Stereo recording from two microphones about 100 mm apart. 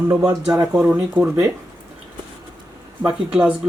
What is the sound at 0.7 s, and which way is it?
Speech, 10° right (ahead or behind).